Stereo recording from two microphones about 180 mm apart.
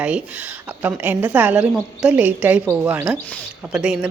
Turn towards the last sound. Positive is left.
turn(degrees=-5)  # may be behind; listen again after turning